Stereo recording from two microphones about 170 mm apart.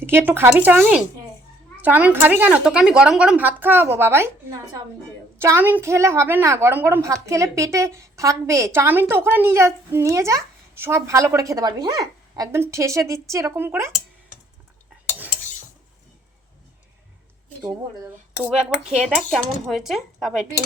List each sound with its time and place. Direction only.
0.0 s a woman's voice: 15° right (ahead or behind)
17.6 s speech: 20° right (ahead or behind)
18.4 s a woman's voice: 5° right (ahead or behind)